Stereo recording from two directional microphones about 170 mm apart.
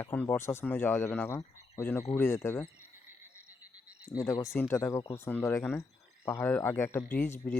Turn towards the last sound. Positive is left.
turn(degrees=10)  # may be behind; listen again after turning